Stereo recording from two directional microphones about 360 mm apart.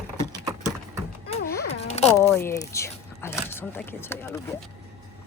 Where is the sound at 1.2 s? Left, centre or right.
Centre.